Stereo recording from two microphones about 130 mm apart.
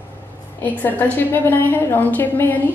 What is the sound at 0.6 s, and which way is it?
A woman's voice, 15° left (ahead or behind).